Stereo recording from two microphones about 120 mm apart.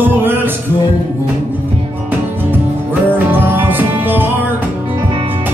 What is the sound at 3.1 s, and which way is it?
Music, 15° right (ahead or behind).